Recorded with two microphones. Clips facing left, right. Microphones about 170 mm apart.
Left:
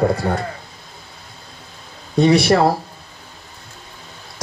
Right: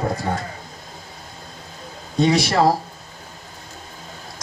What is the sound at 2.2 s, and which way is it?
Speech, 60° left (ahead or behind).